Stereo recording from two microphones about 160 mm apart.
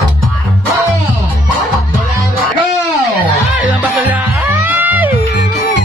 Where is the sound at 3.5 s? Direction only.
10° right (ahead or behind).